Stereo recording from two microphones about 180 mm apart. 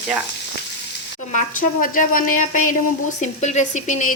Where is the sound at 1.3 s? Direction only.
50° left (ahead or behind).